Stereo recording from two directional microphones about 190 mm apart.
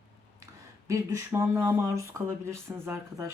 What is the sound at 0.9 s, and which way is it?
Speech, 15° right (ahead or behind).